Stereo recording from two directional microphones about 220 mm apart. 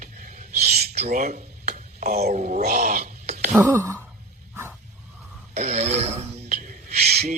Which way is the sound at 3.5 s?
10° right (ahead or behind).